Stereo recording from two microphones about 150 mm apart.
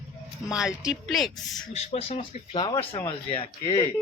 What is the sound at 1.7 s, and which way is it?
Speech, 40° left (ahead or behind).